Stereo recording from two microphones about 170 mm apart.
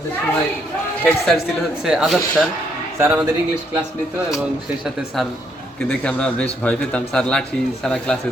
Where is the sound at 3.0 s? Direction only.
15° right (ahead or behind).